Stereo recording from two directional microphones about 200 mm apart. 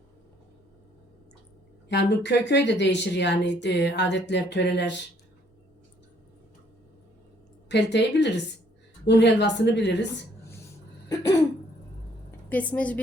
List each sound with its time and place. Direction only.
1.9 s speech: 60° left (ahead or behind)
7.7 s speech: 60° left (ahead or behind)
11.1 s a woman's voice: 20° left (ahead or behind)
12.5 s a woman's voice: 5° left (ahead or behind)